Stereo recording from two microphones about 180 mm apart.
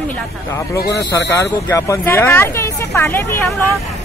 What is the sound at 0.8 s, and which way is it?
Speech, 70° left (ahead or behind).